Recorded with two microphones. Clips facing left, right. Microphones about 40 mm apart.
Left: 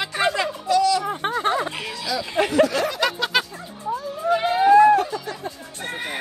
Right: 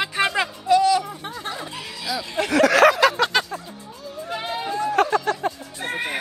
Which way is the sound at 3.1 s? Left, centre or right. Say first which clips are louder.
Right 2 dB; centre.